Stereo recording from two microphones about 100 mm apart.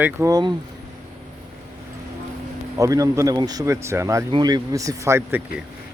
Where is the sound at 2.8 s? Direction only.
35° right (ahead or behind).